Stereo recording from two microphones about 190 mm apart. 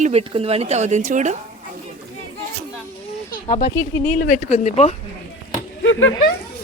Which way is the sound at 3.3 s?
45° left (ahead or behind).